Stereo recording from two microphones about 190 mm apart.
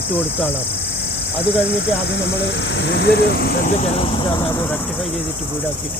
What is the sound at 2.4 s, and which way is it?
Speech, 65° left (ahead or behind).